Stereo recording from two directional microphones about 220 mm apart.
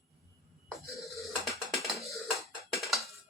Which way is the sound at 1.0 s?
Centre (ahead or behind).